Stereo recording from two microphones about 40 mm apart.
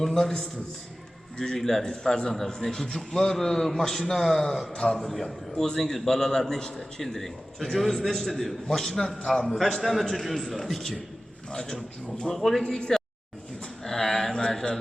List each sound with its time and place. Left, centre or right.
0.0 s a man's voice: centre
4.7 s a man's voice: left
4.9 s a man's voice: centre
9.7 s a man's voice: centre
11.5 s a man's voice: centre
12.9 s a sound: centre